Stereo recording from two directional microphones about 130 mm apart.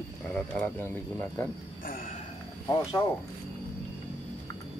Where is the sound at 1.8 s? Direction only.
90° left.